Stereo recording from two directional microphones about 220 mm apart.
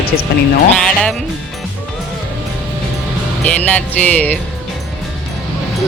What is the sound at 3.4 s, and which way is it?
Music, 5° left (ahead or behind).